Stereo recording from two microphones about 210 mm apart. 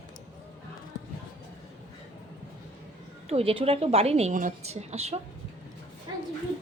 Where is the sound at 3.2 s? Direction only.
25° right (ahead or behind).